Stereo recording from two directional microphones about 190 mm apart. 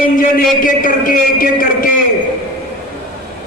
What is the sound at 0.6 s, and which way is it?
A man's voice, 45° left (ahead or behind).